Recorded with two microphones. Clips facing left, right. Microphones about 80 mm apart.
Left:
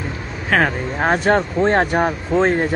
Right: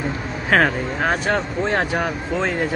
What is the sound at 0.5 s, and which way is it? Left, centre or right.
Speech, centre.